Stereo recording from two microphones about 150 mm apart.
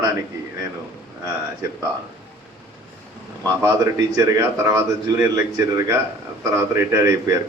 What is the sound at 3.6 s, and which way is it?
A man's voice, 20° right (ahead or behind).